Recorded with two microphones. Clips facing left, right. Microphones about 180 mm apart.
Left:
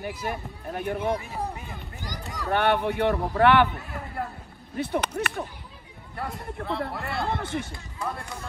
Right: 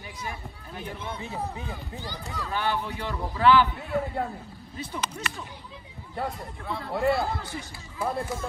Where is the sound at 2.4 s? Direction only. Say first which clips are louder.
Left 7 dB; 65° left (ahead or behind).